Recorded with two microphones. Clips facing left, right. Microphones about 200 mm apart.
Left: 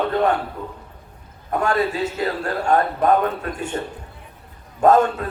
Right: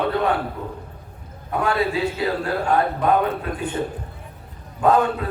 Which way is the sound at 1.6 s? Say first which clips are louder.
Even; 45° left (ahead or behind).